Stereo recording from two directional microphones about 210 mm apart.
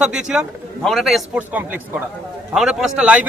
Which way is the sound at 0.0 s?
5° right (ahead or behind).